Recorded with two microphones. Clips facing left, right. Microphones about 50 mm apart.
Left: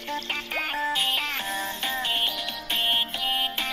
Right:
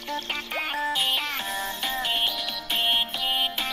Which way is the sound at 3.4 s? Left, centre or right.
Left.